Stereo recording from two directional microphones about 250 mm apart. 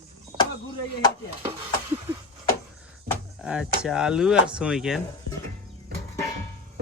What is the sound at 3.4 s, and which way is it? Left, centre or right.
Speech, centre.